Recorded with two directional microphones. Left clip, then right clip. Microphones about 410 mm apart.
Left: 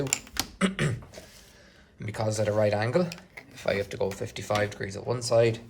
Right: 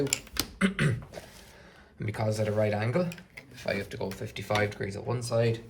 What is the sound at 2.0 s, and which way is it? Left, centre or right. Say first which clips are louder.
Speech: left 2 dB; centre.